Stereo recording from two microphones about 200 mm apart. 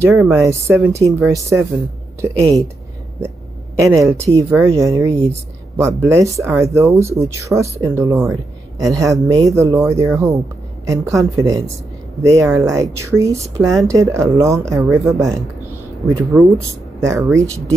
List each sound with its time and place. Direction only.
0.5 s speech: 15° right (ahead or behind)
3.8 s speech: 15° right (ahead or behind)